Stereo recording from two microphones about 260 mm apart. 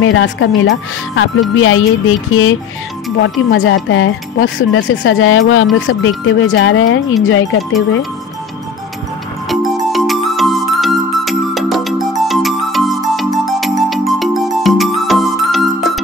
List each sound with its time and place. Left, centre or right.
0.0 s speech: left
9.5 s music: centre